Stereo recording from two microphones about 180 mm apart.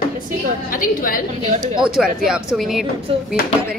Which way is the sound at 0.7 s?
50° left (ahead or behind).